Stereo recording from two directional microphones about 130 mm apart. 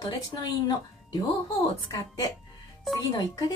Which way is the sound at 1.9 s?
25° left (ahead or behind).